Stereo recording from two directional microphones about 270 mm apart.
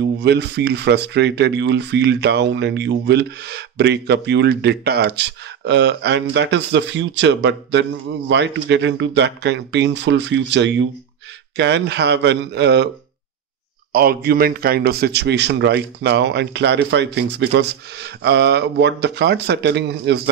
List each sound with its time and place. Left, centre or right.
0.0 s speech: right
13.9 s speech: right